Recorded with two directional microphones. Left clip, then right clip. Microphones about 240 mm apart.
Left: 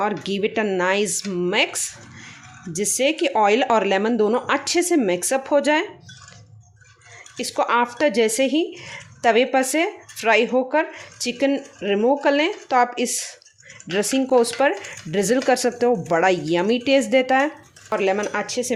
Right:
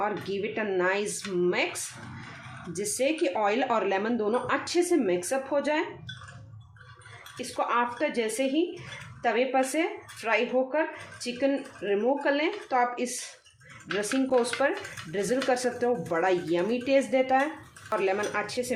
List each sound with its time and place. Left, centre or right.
0.0 s speech: left
7.3 s speech: left